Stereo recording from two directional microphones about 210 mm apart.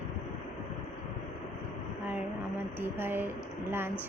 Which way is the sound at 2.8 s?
10° right (ahead or behind).